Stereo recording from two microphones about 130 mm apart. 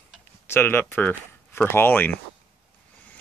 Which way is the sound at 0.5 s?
15° left (ahead or behind).